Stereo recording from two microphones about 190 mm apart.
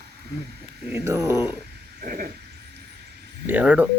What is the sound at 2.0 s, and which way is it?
Owl, 50° right (ahead or behind).